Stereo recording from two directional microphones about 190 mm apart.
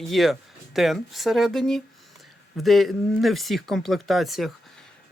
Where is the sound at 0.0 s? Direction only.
Centre (ahead or behind).